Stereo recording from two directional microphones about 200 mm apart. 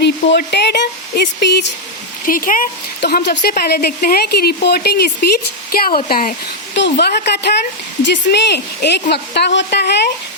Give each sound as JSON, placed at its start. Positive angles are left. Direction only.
{"t": 0.0, "sound": "speech", "side_deg": 60}
{"t": 2.2, "sound": "a woman's voice", "side_deg": 45}
{"t": 6.7, "sound": "speech", "side_deg": 60}